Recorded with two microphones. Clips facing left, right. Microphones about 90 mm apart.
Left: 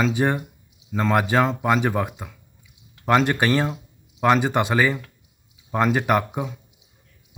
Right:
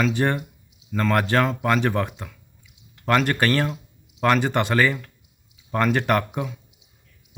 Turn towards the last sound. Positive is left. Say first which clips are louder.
# left 1 dB
turn(degrees=15)  # may be behind; listen again after turning